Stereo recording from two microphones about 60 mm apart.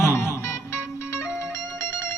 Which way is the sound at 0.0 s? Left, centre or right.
Left.